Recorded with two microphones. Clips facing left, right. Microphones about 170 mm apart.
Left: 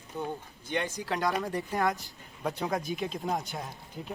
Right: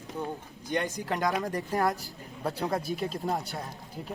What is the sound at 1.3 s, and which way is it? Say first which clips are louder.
Speech: right 1 dB; 5° left (ahead or behind).